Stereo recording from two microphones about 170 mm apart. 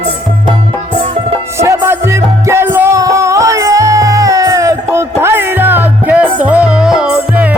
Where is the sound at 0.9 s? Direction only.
45° right (ahead or behind).